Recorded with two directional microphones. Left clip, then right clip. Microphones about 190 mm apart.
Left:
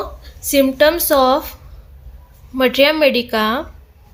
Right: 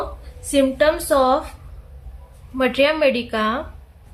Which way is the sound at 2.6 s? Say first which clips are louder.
Left 4 dB; 45° left (ahead or behind).